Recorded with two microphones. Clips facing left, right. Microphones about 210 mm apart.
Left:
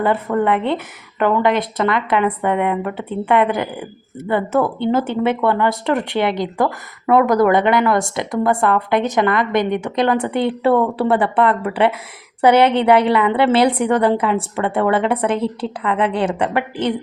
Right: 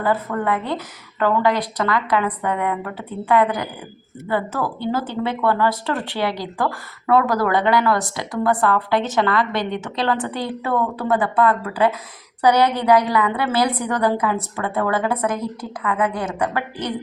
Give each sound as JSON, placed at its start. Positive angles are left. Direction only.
{"t": 0.0, "sound": "speech", "side_deg": 25}